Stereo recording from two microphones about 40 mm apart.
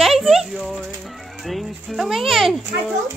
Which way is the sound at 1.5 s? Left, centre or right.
Centre.